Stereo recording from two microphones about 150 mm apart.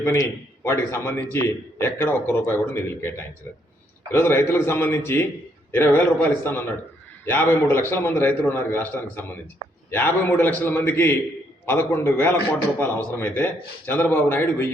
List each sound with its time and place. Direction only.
0.0 s a man's voice: 20° left (ahead or behind)